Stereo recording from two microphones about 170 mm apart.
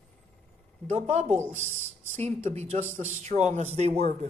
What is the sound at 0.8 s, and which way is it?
Speech, 40° right (ahead or behind).